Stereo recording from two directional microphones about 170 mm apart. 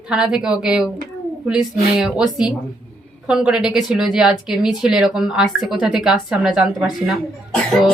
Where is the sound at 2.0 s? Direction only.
5° right (ahead or behind).